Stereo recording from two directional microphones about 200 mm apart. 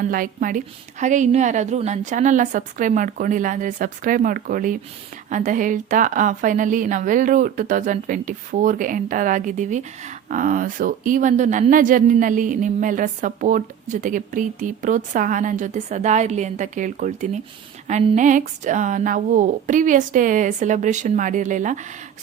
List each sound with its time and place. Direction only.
0.1 s a woman's voice: 45° right (ahead or behind)